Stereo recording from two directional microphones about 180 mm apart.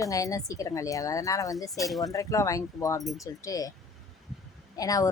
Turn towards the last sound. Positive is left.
turn(degrees=20)  # may be behind; listen again after turning